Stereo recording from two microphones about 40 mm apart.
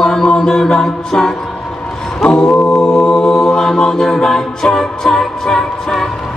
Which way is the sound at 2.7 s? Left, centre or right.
Centre.